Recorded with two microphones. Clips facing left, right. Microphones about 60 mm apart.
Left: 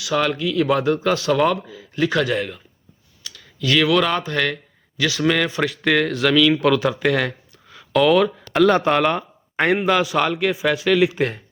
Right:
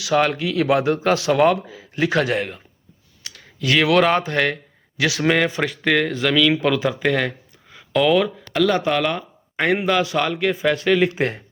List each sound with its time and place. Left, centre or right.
0.0 s speech: right
0.7 s speech: right
3.2 s clicking: right
3.8 s speech: right
4.2 s speech: centre
4.9 s speech: right
5.5 s speech: centre
8.7 s speech: left; by 11.3 s centre